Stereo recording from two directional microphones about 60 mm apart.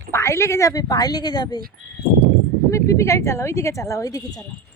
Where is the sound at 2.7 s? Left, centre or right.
Left.